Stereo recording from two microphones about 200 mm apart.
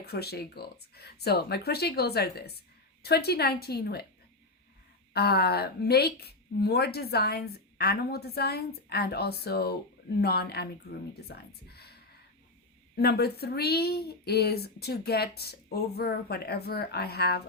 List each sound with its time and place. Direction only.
0.0 s speech: 55° left (ahead or behind)
5.1 s speech: 55° left (ahead or behind)